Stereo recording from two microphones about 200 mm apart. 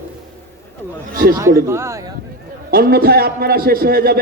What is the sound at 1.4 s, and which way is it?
Speech, 15° right (ahead or behind).